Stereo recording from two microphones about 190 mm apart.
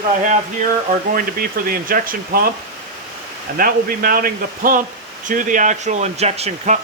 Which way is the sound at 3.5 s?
50° right (ahead or behind).